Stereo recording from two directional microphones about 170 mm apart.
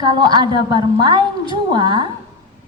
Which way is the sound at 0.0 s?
25° right (ahead or behind).